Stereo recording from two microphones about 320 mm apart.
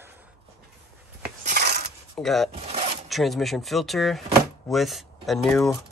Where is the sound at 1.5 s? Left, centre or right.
Right.